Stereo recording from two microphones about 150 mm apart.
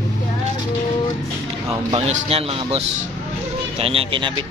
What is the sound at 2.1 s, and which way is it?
Speech, 40° right (ahead or behind).